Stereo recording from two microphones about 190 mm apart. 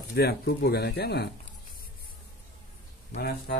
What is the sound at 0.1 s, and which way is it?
Speech, 55° left (ahead or behind).